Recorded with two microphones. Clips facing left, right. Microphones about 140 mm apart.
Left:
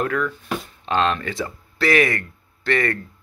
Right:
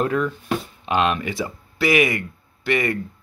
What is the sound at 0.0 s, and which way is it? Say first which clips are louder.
Speech: right 2 dB; 20° right (ahead or behind).